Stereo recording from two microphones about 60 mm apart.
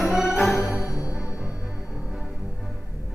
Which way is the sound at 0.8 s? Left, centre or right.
Left.